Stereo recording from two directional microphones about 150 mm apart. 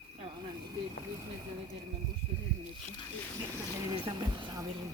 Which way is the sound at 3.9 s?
30° right (ahead or behind).